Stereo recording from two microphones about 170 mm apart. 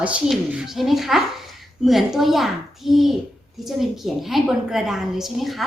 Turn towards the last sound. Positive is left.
turn(degrees=0)  # may be behind; listen again after turning